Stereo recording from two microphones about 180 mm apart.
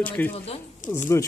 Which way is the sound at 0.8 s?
45° left (ahead or behind).